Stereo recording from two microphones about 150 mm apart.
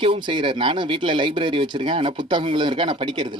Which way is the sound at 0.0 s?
35° right (ahead or behind).